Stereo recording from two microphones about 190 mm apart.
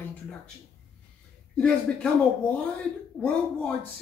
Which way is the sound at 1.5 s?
5° left (ahead or behind).